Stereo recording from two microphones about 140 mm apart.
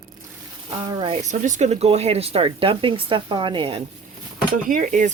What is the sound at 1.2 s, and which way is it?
Speech, 60° right (ahead or behind).